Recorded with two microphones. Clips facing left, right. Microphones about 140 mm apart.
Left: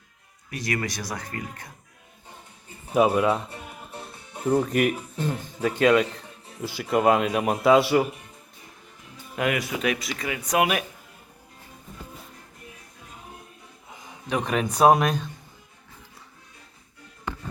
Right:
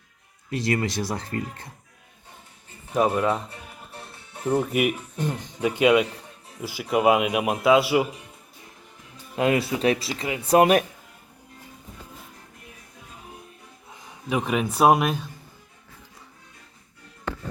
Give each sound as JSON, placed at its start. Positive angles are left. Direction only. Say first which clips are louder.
{"t": 0.5, "sound": "speech", "louder": "right 4 dB", "side_deg": -25}
{"t": 2.9, "sound": "speech", "louder": "left 2 dB", "side_deg": 5}
{"t": 4.4, "sound": "a man's voice", "louder": "left 1 dB", "side_deg": -10}
{"t": 9.3, "sound": "speech", "louder": "right 4 dB", "side_deg": -30}
{"t": 13.9, "sound": "a man's voice", "louder": "right 1 dB", "side_deg": -5}